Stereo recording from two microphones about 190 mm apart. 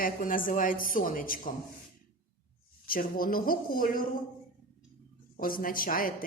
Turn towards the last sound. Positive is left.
turn(degrees=50)  # may be behind; listen again after turning